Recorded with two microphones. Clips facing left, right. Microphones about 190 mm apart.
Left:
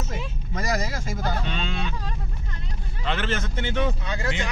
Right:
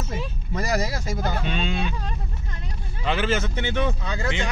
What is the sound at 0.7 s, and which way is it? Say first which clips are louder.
Speech: right 3 dB; 35° right (ahead or behind).